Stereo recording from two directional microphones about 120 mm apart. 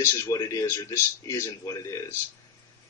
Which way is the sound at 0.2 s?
25° left (ahead or behind).